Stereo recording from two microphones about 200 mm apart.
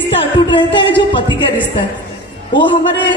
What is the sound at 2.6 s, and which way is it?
Speech, 25° left (ahead or behind).